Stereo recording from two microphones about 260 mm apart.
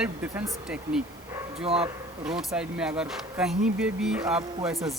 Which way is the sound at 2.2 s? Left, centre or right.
Centre.